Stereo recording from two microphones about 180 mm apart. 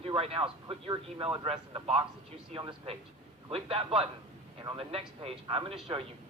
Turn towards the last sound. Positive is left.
turn(degrees=-30)  # may be behind; listen again after turning